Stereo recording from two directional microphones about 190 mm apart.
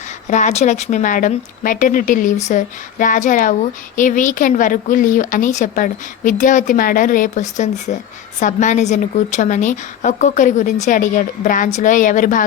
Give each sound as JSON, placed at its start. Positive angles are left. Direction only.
{"t": 0.3, "sound": "a woman's voice", "side_deg": 40}